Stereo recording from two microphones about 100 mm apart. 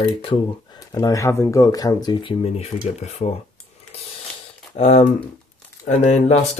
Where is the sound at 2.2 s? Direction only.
70° left (ahead or behind); by 3.4 s 90° left.